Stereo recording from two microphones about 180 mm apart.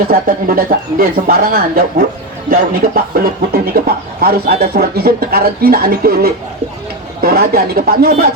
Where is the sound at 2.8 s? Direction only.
55° right (ahead or behind).